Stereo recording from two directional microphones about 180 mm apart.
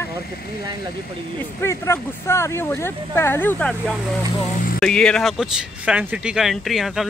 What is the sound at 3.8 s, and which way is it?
Speech, centre (ahead or behind).